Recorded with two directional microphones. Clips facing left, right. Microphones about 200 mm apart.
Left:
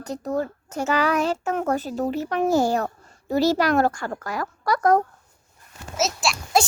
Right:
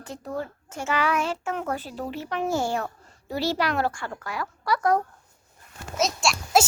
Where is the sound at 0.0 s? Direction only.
40° left (ahead or behind).